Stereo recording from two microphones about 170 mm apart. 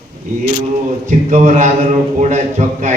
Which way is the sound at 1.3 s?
45° right (ahead or behind).